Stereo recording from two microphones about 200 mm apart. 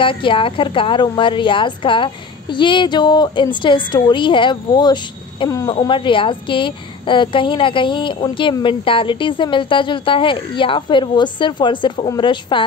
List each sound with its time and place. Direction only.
0.0 s a woman's voice: 25° left (ahead or behind)